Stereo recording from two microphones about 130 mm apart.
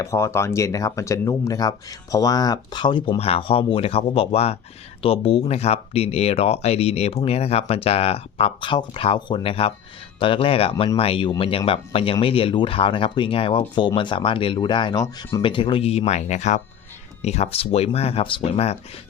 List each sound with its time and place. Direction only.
0.0 s speech: 20° left (ahead or behind)
3.2 s speech: 50° left (ahead or behind)